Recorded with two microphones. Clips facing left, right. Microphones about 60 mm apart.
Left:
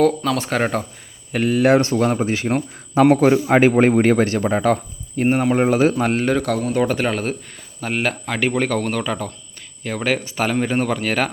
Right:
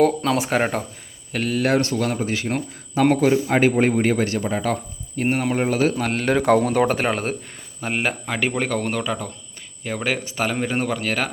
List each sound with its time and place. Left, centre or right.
0.3 s speech: centre
1.3 s speech: centre; by 4.8 s left
5.1 s speech: left
6.3 s speech: centre